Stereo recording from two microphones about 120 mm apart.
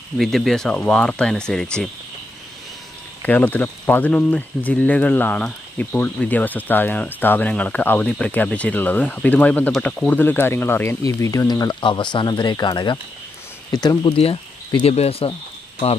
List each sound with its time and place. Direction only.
0.2 s speech: centre (ahead or behind)
3.2 s speech: 15° left (ahead or behind); by 14.1 s 35° left (ahead or behind)
14.1 s speech: 50° left (ahead or behind)